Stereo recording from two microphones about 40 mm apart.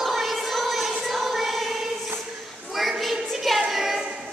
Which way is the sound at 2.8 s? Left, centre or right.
Centre.